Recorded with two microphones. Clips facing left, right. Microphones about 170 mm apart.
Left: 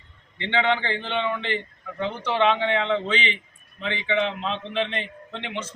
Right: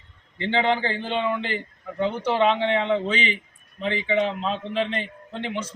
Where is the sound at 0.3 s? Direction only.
40° right (ahead or behind).